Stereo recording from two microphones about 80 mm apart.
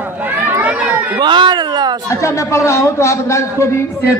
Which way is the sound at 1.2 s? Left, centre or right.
Right.